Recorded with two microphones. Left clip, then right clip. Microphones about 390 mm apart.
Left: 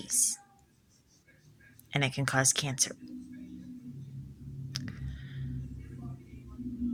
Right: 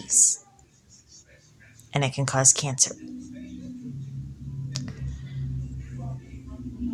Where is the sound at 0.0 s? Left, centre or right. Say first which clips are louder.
Right 10 dB; left.